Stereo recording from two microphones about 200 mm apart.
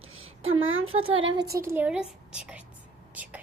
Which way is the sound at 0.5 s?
85° right.